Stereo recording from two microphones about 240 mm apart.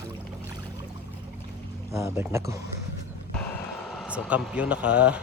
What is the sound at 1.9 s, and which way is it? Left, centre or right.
Speech, centre.